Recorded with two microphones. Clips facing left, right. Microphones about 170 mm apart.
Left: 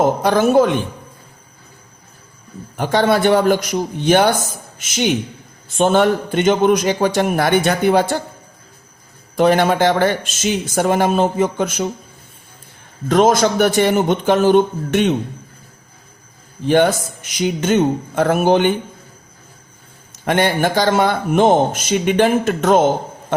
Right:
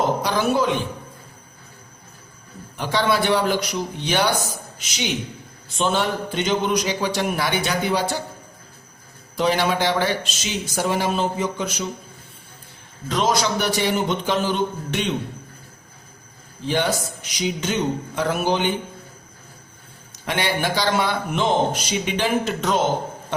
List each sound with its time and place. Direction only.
0.0 s a man's voice: 50° left (ahead or behind)
2.7 s a man's voice: 50° left (ahead or behind)
9.3 s a man's voice: 50° left (ahead or behind)
13.1 s a man's voice: 50° left (ahead or behind)
16.6 s a man's voice: 50° left (ahead or behind)
20.2 s a man's voice: 50° left (ahead or behind)